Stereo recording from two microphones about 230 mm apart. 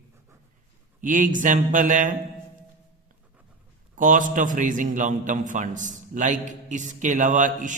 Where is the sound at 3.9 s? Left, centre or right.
Right.